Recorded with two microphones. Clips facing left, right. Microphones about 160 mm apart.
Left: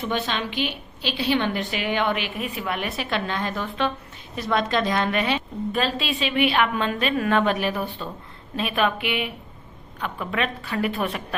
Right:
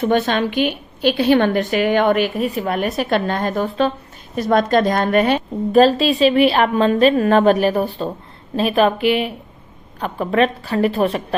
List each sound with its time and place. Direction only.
0.0 s a woman's voice: 50° right (ahead or behind); by 11.3 s 35° right (ahead or behind)